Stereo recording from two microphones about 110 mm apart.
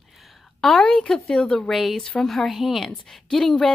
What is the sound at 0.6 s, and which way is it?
Speech, 5° left (ahead or behind).